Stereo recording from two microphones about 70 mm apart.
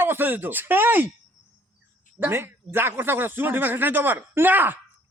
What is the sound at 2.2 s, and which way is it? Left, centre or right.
A man's voice, right.